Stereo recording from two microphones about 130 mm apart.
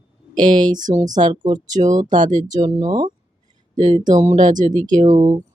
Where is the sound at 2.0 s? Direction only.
85° right.